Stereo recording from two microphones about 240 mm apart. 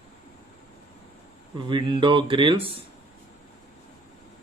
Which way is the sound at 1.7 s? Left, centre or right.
Centre.